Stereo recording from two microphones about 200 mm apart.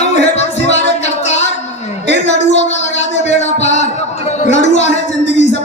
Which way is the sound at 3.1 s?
35° left (ahead or behind).